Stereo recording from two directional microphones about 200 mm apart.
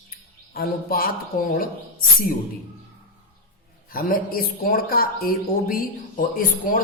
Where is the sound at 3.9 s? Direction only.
45° left (ahead or behind).